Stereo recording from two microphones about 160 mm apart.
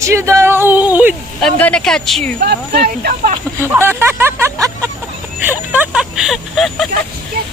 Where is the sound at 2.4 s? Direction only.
80° right; by 3.3 s 65° right (ahead or behind).